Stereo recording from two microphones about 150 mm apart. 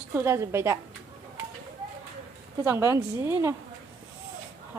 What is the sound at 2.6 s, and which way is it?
Speech, 15° right (ahead or behind).